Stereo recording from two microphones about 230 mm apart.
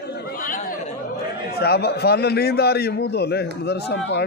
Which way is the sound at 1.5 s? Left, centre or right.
Left.